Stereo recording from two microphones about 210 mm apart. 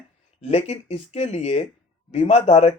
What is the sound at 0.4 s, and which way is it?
Speech, 30° left (ahead or behind).